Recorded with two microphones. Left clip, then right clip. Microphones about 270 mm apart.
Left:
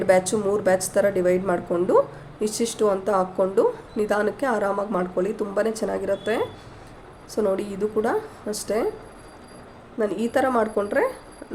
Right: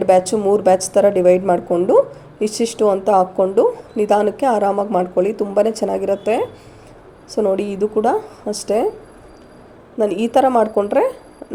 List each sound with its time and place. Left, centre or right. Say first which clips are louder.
0.0 s a woman's voice: right 6 dB; centre
10.0 s a woman's voice: right 8 dB; centre